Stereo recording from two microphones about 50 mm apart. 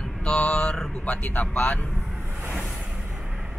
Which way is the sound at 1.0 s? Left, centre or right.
Left.